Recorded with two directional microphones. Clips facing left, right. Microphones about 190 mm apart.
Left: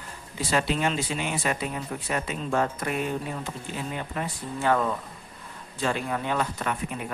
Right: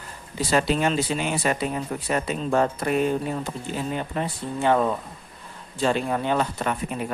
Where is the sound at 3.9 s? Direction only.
30° right (ahead or behind).